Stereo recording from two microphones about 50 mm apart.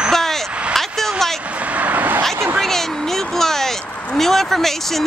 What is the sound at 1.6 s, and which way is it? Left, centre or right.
Vehicle, right.